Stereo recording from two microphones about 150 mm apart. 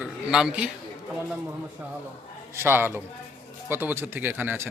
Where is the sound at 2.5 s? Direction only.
15° right (ahead or behind).